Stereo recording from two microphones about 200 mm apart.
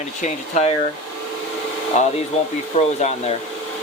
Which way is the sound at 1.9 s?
35° left (ahead or behind).